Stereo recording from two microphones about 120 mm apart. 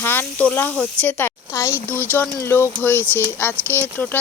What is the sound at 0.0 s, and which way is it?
Speech, 15° left (ahead or behind).